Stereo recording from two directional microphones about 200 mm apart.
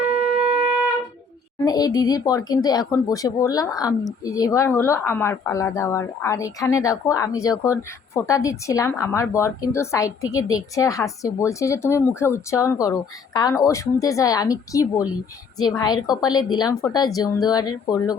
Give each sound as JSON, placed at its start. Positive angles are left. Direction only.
{"t": 1.6, "sound": "speech", "side_deg": 20}